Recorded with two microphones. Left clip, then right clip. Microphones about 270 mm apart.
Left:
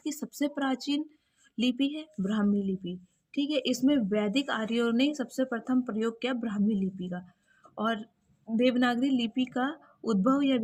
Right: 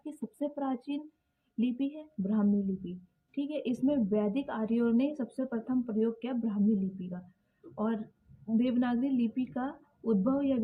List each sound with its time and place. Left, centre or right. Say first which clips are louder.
0.0 s speech: left 4 dB; left
8.5 s speech: left 5 dB; left